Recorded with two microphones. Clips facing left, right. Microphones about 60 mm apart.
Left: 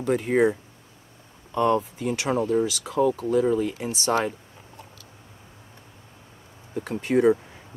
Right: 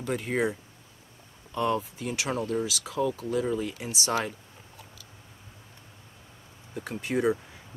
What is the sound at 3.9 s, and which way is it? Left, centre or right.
Speech, centre.